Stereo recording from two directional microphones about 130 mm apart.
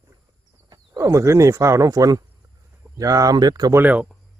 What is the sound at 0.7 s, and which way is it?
Speech, 25° right (ahead or behind).